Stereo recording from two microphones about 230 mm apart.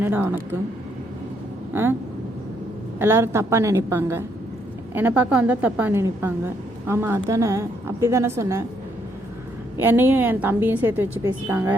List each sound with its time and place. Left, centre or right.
0.0 s a woman's voice: centre
1.7 s a woman's voice: centre
3.0 s a woman's voice: centre
9.8 s a woman's voice: centre